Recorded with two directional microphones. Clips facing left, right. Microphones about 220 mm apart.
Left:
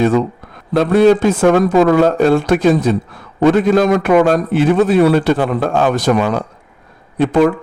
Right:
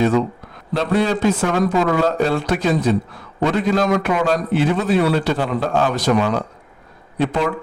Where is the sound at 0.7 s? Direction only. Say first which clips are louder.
Left 8 dB; 50° left (ahead or behind).